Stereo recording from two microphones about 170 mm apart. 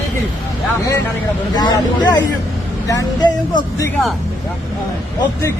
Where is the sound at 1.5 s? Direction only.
25° left (ahead or behind).